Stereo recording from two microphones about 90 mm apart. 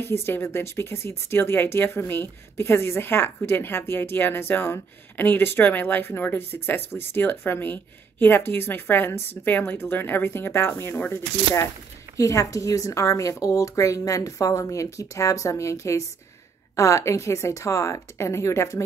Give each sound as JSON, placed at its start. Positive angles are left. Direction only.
{"t": 0.0, "sound": "a woman's voice", "side_deg": 25}